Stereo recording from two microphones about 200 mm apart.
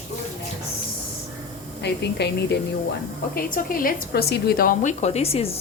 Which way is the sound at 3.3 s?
45° left (ahead or behind).